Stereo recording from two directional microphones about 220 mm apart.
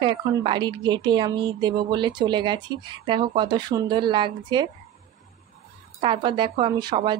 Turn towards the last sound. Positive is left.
turn(degrees=-20)  # may be behind; listen again after turning